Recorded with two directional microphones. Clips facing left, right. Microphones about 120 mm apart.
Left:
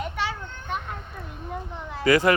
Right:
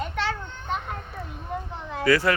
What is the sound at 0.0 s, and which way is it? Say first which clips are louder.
Children playing: right 1 dB; 10° left (ahead or behind).